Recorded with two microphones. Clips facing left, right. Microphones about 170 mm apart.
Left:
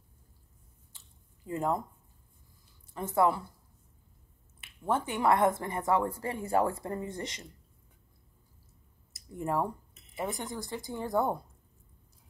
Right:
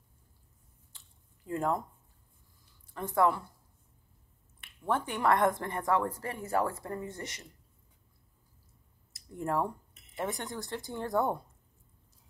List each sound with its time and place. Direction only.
1.5 s a woman's voice: 15° left (ahead or behind)
3.2 s a woman's voice: 5° left (ahead or behind)
4.6 s a woman's voice: 10° left (ahead or behind)
9.4 s a woman's voice: 10° left (ahead or behind)